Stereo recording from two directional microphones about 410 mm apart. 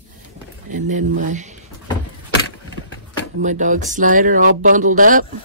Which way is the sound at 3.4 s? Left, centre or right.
Centre.